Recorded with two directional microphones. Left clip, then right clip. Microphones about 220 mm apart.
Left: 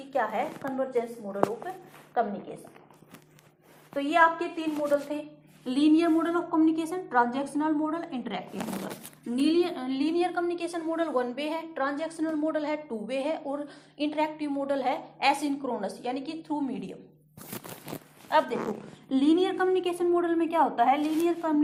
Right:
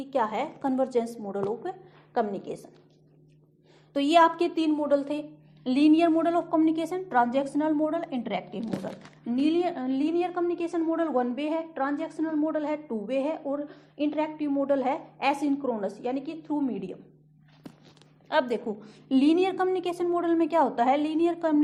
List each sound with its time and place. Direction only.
0.1 s a woman's voice: 50° right (ahead or behind)
3.9 s a woman's voice: 50° right (ahead or behind)
9.3 s a woman's voice: 30° right (ahead or behind)
18.3 s a woman's voice: 50° right (ahead or behind)